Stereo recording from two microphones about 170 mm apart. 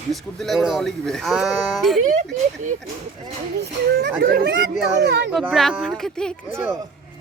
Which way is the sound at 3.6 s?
80° right.